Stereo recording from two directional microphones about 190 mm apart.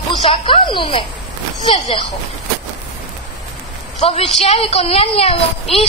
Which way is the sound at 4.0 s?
30° left (ahead or behind).